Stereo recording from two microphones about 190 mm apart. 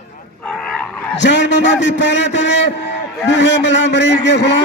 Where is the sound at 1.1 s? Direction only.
70° left (ahead or behind).